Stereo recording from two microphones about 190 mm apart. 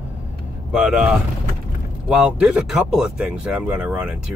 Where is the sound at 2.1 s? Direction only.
5° right (ahead or behind).